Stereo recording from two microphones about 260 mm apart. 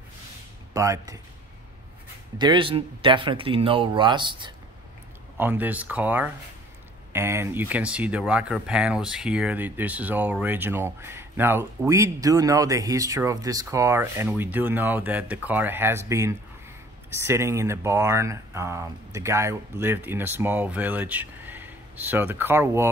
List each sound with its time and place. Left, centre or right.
0.7 s speech: centre
2.3 s speech: centre
5.4 s speech: centre